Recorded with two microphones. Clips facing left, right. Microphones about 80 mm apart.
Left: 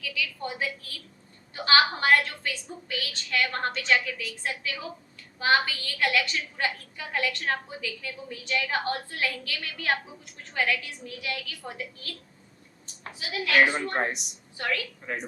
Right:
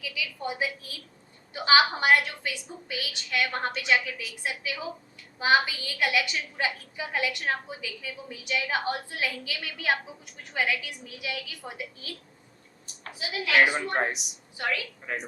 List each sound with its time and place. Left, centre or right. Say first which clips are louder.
0.0 s a woman's voice: left 1 dB; centre
12.8 s a sound: right 2 dB; centre
13.7 s a woman's voice: even; centre